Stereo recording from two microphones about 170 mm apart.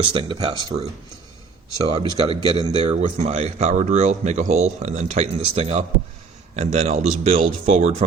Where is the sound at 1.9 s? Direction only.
25° right (ahead or behind).